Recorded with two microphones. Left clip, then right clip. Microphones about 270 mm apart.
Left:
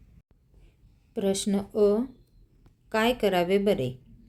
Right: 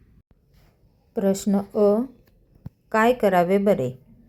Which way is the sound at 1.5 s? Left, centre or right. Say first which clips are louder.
Right 3 dB; centre.